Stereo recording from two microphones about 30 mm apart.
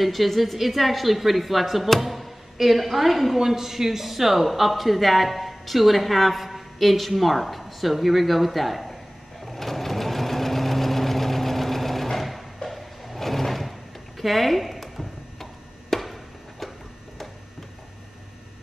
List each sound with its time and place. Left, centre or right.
0.0 s a man's voice: centre
9.4 s sewing machine: centre
12.6 s drawer open or close: centre
15.9 s a sound: centre